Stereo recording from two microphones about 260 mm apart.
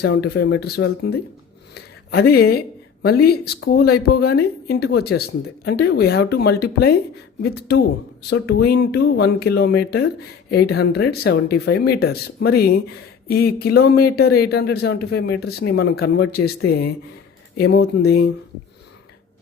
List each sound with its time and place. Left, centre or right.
0.0 s speech: left